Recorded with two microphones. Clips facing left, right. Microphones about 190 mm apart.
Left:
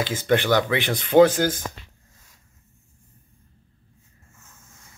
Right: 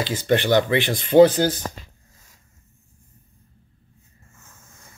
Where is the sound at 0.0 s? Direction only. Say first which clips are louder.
Right 1 dB; 55° left (ahead or behind).